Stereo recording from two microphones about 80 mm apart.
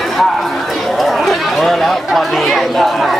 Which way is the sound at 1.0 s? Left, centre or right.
Centre.